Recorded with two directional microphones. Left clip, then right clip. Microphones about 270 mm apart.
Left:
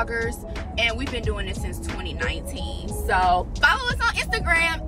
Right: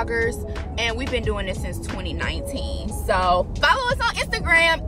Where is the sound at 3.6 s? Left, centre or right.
Centre.